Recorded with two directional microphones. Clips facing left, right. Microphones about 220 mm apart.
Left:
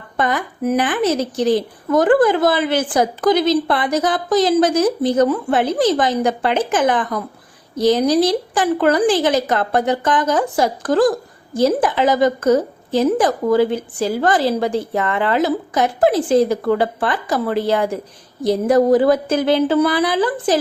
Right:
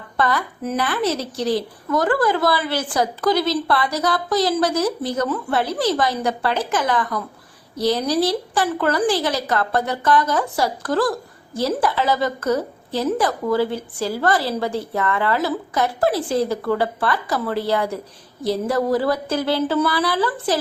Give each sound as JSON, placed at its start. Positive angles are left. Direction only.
{"t": 0.2, "sound": "a woman's voice", "side_deg": 15}